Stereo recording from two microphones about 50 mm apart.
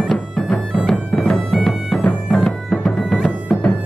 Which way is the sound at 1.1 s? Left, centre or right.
Centre.